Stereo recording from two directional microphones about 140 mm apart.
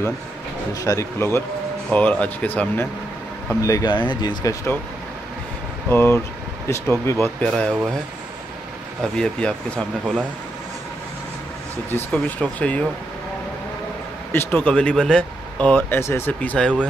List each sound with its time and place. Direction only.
0.8 s speech: 20° left (ahead or behind)
3.6 s speech: 25° left (ahead or behind)
5.9 s speech: 15° left (ahead or behind)
7.4 s speech: 5° left (ahead or behind)
9.0 s speech: 5° left (ahead or behind)
11.9 s speech: 10° left (ahead or behind)
14.3 s speech: 15° left (ahead or behind)